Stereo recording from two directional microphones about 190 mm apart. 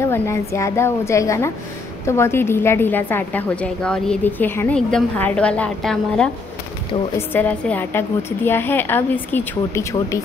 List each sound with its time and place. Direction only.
0.0 s a woman's voice: 15° left (ahead or behind)